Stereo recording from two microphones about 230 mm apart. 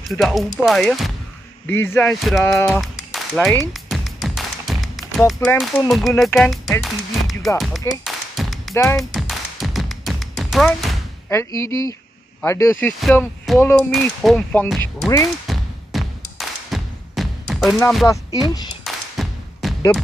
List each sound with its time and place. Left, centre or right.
0.0 s speech: centre
3.7 s music: centre
5.6 s speech: centre
8.0 s a sound: centre
8.7 s speech: centre
9.1 s tap: centre
11.2 s speech: centre
15.4 s a sound: centre
16.3 s music: centre
17.7 s speech: centre
18.0 s speech: centre
18.9 s thump: centre